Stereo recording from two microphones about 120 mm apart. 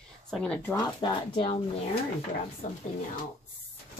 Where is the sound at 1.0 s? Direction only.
45° left (ahead or behind).